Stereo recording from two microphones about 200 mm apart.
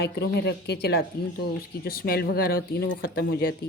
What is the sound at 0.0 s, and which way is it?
A woman's voice, 55° left (ahead or behind).